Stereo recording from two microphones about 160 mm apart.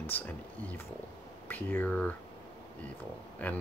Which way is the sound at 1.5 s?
10° left (ahead or behind).